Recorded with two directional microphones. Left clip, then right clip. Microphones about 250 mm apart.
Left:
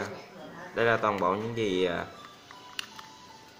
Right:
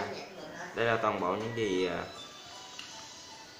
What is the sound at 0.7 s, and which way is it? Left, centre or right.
Speech, left.